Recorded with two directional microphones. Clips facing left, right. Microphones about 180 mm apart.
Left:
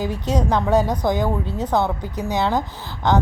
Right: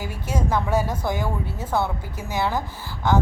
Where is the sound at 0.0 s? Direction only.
20° left (ahead or behind).